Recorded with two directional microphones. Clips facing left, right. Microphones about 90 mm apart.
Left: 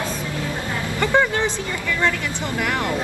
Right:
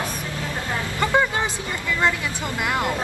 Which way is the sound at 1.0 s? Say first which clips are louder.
Left 2 dB; 15° right (ahead or behind).